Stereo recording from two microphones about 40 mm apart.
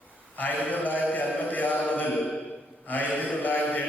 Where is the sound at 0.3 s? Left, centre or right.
Left.